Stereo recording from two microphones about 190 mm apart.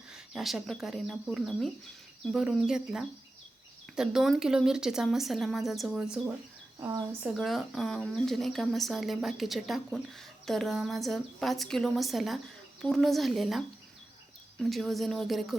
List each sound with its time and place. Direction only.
0.1 s speech: centre (ahead or behind)
6.7 s speech: 15° right (ahead or behind)
7.3 s speech: centre (ahead or behind)